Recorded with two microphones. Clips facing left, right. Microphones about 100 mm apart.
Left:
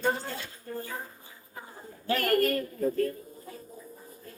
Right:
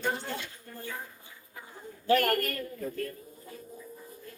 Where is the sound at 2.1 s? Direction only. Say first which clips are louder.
Right 1 dB; 40° right (ahead or behind).